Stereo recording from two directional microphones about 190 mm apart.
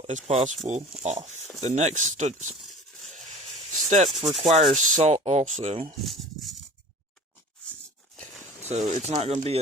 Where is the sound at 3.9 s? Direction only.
40° right (ahead or behind).